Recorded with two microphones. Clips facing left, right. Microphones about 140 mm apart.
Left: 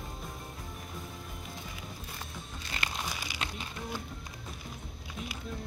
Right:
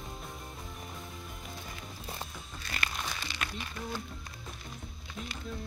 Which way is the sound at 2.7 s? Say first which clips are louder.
Even; 15° left (ahead or behind).